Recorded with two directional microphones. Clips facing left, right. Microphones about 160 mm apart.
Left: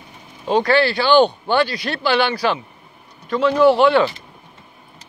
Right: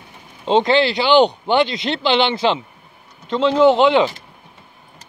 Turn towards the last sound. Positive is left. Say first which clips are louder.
# even
turn(degrees=-20)  # may be behind; listen again after turning